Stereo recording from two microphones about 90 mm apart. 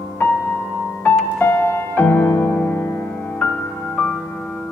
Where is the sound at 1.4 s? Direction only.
25° left (ahead or behind).